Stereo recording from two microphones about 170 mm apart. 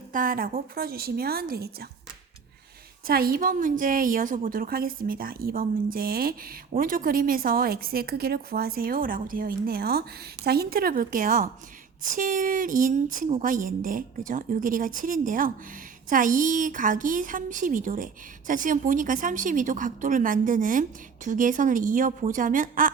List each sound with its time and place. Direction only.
0.1 s a woman's voice: 55° right (ahead or behind)
3.1 s a woman's voice: 60° right (ahead or behind)